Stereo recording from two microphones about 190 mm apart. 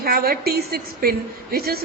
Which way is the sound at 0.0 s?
50° right (ahead or behind).